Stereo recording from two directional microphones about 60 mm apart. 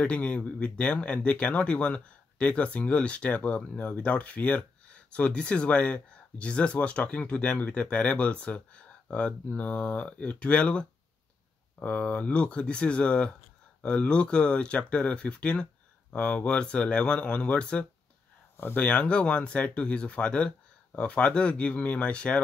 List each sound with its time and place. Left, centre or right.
0.0 s speech: left